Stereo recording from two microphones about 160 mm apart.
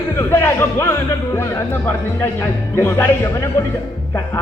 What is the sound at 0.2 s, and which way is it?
Speech, 15° left (ahead or behind).